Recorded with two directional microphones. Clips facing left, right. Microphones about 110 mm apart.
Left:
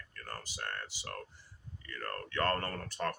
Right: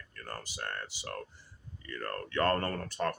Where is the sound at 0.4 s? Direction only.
20° right (ahead or behind).